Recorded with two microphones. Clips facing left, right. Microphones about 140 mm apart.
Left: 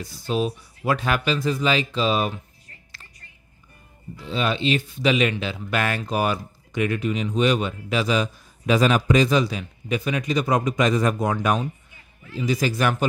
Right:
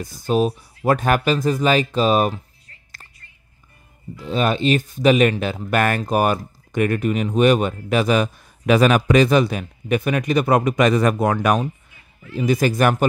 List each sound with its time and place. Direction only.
0.0 s speech: 45° right (ahead or behind)
4.2 s speech: 45° right (ahead or behind)